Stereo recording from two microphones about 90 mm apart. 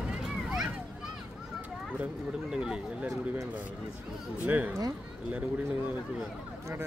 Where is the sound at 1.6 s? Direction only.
15° right (ahead or behind).